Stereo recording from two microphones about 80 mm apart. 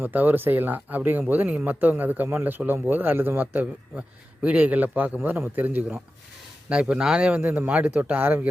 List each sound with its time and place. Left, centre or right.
0.0 s a man's voice: right